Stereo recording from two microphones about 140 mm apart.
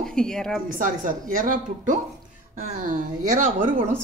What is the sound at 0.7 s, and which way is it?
A woman's voice, 70° right (ahead or behind).